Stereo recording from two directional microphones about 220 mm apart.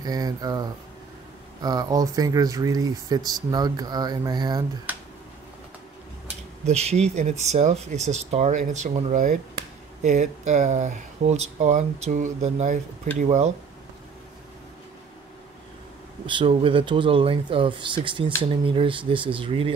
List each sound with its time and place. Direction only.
0.0 s speech: 15° right (ahead or behind)
4.9 s speech: 10° right (ahead or behind)
6.6 s speech: 30° right (ahead or behind)
16.3 s speech: 25° right (ahead or behind)